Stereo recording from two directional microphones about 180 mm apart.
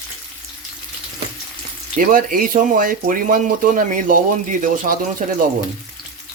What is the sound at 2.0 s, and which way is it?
Speech, 50° right (ahead or behind).